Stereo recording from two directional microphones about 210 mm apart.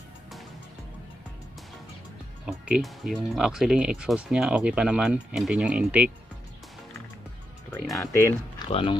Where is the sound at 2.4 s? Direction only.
5° right (ahead or behind).